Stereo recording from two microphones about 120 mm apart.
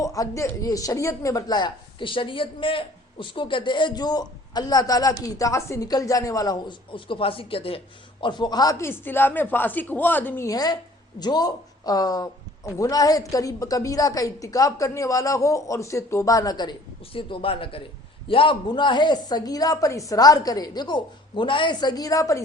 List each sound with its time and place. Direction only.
0.0 s speech: 25° left (ahead or behind); by 7.8 s 50° left (ahead or behind)
8.2 s speech: 40° left (ahead or behind)
8.8 s speech: 20° left (ahead or behind)
10.4 s a woman's voice: 30° left (ahead or behind)
17.1 s speech: 50° left (ahead or behind); by 22.4 s 30° left (ahead or behind)